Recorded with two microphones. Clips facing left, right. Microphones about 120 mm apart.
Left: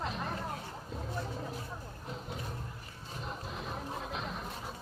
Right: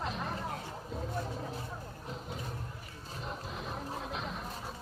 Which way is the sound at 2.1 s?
Centre (ahead or behind).